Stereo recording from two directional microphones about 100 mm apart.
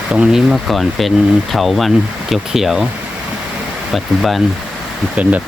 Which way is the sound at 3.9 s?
Centre (ahead or behind).